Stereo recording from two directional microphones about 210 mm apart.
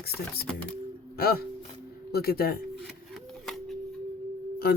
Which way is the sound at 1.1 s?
45° left (ahead or behind).